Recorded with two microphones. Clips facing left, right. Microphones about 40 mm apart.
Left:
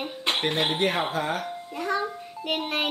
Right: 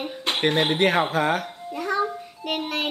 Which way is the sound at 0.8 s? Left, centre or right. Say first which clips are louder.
Right 5 dB; right.